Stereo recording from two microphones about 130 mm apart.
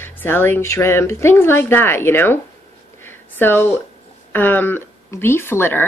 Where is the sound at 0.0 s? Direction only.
15° left (ahead or behind).